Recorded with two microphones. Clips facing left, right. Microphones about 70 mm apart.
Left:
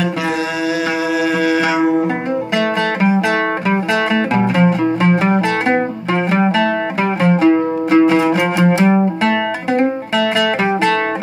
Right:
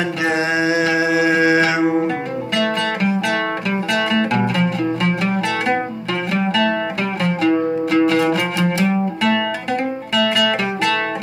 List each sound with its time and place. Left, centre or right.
1.1 s music: centre
4.1 s music: left